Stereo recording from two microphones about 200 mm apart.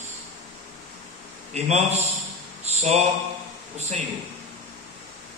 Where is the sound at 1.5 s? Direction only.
35° right (ahead or behind).